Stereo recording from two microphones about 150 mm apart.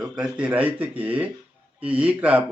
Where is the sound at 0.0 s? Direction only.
5° right (ahead or behind).